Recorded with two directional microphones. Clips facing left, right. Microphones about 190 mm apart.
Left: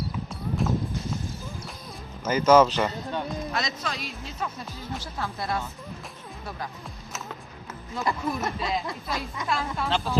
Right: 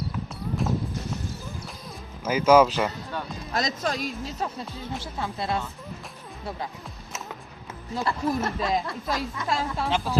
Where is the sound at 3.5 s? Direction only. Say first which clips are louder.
Right 4 dB; 40° right (ahead or behind).